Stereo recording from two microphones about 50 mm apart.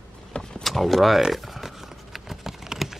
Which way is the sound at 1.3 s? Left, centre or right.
Centre.